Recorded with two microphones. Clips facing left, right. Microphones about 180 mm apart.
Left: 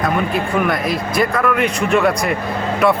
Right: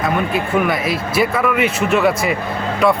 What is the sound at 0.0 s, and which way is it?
Speech, centre (ahead or behind).